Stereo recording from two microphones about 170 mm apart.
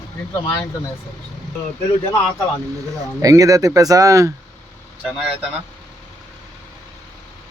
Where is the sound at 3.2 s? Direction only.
20° right (ahead or behind).